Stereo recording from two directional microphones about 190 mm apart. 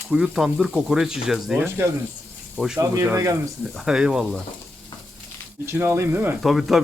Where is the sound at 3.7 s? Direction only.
Centre (ahead or behind).